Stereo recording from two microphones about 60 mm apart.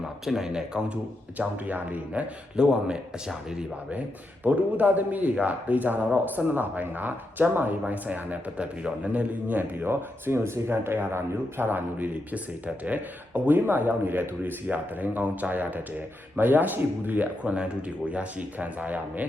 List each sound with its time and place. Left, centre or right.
0.3 s speech: centre
1.4 s speech: right
2.6 s speech: centre